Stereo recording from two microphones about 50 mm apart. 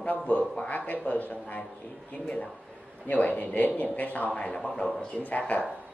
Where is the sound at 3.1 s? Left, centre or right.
Left.